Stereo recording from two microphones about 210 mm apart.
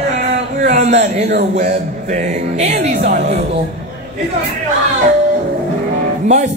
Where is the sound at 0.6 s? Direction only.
35° right (ahead or behind).